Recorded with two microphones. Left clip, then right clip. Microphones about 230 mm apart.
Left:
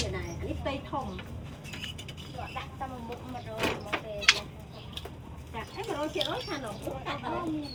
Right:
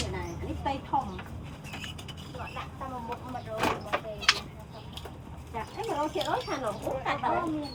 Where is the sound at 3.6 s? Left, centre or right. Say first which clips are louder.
Right 2 dB; centre.